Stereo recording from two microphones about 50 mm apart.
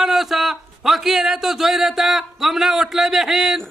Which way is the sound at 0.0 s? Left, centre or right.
Centre.